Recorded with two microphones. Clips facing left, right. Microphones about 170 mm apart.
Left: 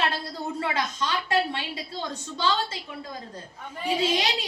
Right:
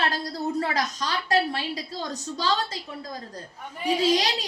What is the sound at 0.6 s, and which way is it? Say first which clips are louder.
A woman's voice: right 1 dB; 40° right (ahead or behind).